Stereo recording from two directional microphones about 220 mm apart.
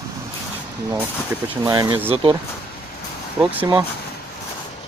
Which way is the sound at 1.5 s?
15° right (ahead or behind).